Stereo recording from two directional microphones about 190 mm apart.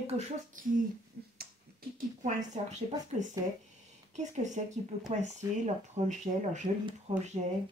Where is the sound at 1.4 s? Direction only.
50° right (ahead or behind).